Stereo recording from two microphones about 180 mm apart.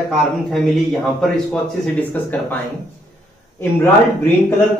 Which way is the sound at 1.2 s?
Centre (ahead or behind).